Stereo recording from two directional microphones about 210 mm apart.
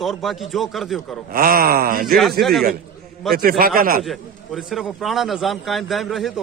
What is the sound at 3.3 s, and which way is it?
Speech, 45° right (ahead or behind).